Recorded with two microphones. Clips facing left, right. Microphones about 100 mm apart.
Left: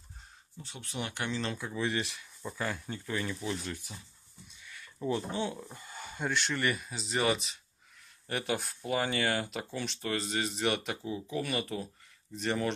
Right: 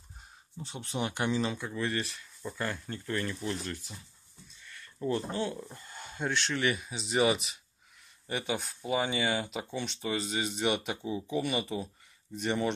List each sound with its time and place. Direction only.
0.6 s speech: 20° right (ahead or behind)
1.7 s speech: 10° left (ahead or behind)
4.5 s a sound: 10° left (ahead or behind)
5.5 s speech: 5° left (ahead or behind)